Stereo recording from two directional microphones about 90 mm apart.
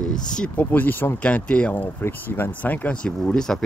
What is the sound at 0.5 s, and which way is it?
Speech, 20° left (ahead or behind).